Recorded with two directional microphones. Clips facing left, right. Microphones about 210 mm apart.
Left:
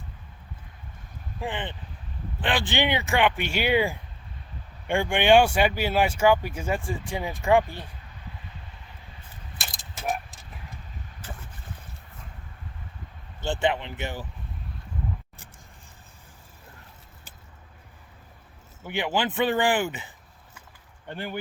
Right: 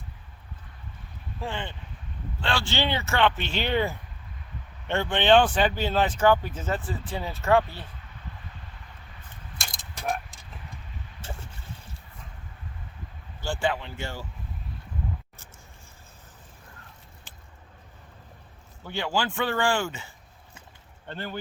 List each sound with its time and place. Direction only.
1.4 s speech: 15° left (ahead or behind)
9.6 s keys jangling: 5° left (ahead or behind)
11.2 s a sound: 25° right (ahead or behind)
13.4 s speech: 20° left (ahead or behind)
18.9 s speech: 15° left (ahead or behind)
21.1 s speech: 15° left (ahead or behind)